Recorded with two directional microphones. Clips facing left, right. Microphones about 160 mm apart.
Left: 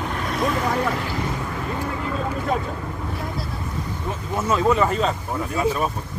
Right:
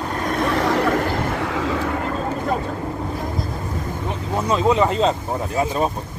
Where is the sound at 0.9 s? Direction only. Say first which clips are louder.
Right 5 dB; 50° right (ahead or behind).